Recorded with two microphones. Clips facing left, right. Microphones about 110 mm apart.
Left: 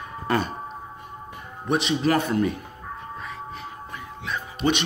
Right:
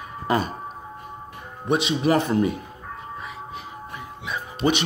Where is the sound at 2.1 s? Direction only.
20° right (ahead or behind).